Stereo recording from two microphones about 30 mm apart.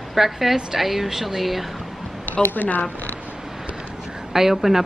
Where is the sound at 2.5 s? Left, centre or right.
Left.